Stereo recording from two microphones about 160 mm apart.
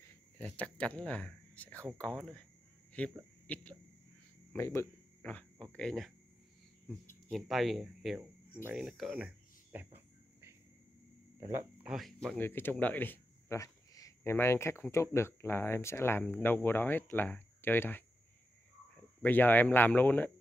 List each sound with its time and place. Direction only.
0.0 s speech: 10° left (ahead or behind)
4.6 s speech: 15° left (ahead or behind); by 9.8 s 10° right (ahead or behind)
11.3 s speech: 20° right (ahead or behind)
11.8 s speech: centre (ahead or behind)
12.4 s speech: 15° left (ahead or behind)
19.2 s speech: 10° left (ahead or behind)